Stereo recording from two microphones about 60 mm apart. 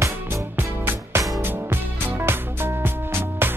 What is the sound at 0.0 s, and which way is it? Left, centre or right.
Music, right.